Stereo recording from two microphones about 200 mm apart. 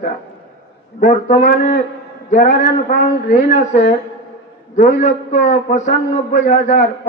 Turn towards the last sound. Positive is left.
turn(degrees=40)  # may be behind; listen again after turning